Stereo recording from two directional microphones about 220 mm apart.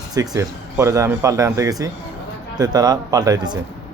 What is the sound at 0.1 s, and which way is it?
Speech, 15° right (ahead or behind).